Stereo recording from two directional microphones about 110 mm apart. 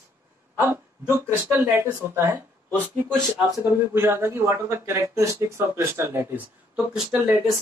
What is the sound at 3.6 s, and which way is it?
A man's voice, 20° right (ahead or behind).